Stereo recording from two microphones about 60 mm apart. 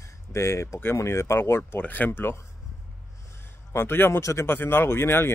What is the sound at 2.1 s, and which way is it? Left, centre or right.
Speech, left.